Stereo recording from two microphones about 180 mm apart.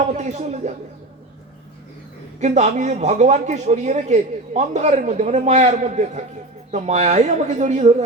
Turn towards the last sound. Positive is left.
turn(degrees=-40)  # may be behind; listen again after turning